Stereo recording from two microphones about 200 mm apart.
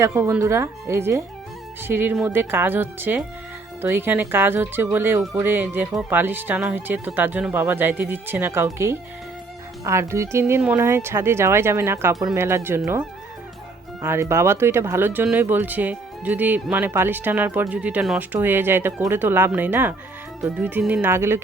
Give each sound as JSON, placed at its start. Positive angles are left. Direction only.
{"t": 0.0, "sound": "speech", "side_deg": -15}
{"t": 14.0, "sound": "speech", "side_deg": -10}